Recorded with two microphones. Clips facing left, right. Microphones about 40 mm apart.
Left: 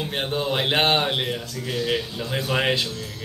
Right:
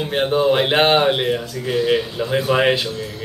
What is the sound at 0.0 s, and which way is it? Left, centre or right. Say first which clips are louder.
A man's voice: right 8 dB; centre.